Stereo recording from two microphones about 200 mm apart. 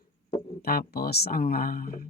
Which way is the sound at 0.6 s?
50° left (ahead or behind).